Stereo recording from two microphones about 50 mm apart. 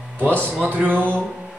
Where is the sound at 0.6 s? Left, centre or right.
Right.